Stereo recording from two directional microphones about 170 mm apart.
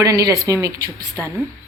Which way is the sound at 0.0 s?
20° right (ahead or behind).